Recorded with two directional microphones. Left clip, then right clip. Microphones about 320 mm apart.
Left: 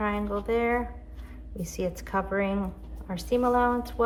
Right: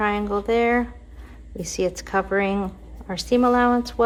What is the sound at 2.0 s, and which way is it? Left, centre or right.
Speech, right.